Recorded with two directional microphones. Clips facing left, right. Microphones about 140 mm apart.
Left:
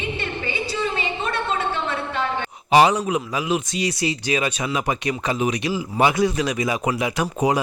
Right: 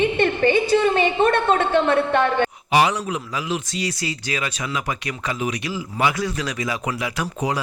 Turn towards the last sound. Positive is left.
turn(degrees=15)  # may be behind; listen again after turning